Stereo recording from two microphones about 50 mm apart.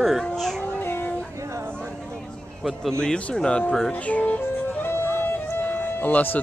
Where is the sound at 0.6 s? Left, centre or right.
Left.